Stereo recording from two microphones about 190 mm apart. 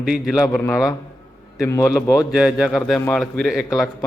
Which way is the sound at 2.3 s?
5° right (ahead or behind).